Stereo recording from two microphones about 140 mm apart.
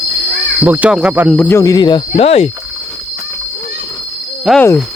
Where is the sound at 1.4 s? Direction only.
25° left (ahead or behind); by 2.5 s 45° left (ahead or behind).